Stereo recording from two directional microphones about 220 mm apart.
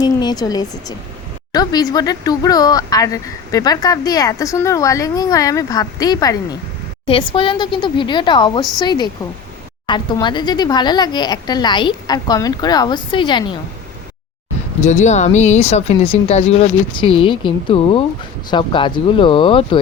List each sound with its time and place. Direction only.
0.0 s speech: 20° left (ahead or behind)
14.8 s speech: 30° left (ahead or behind)